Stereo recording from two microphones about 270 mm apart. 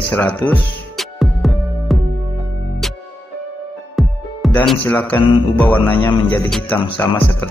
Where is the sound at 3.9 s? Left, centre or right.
Centre.